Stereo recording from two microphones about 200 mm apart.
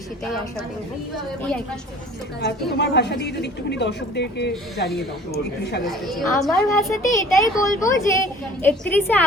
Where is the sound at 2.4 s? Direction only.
55° left (ahead or behind).